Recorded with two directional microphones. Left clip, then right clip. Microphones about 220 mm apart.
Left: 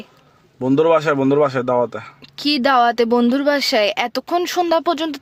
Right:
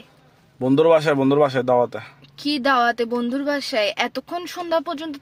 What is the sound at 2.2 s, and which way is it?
Speech, 40° left (ahead or behind).